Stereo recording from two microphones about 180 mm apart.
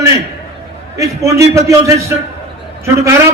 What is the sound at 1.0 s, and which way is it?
A man's voice, 20° right (ahead or behind).